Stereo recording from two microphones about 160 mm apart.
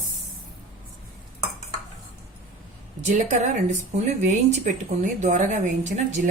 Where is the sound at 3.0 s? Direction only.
50° right (ahead or behind).